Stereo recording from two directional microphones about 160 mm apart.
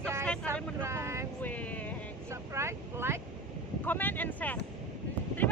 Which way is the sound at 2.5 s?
15° right (ahead or behind).